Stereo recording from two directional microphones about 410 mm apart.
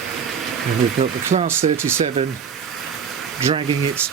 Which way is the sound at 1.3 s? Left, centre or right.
Centre.